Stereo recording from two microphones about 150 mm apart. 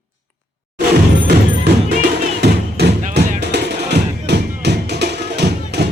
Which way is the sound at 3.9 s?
90° right.